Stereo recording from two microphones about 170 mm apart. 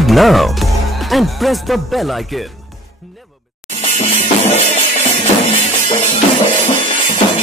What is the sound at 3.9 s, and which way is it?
Music, 40° left (ahead or behind).